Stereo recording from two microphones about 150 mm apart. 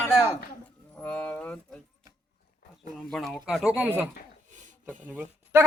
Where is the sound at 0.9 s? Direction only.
10° left (ahead or behind).